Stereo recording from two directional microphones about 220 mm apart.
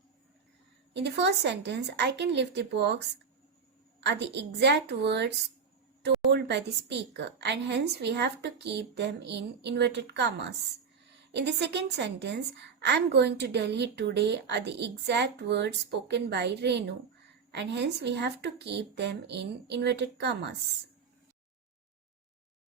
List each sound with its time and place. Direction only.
0.9 s speech: 50° right (ahead or behind)
4.0 s a woman's voice: 50° right (ahead or behind)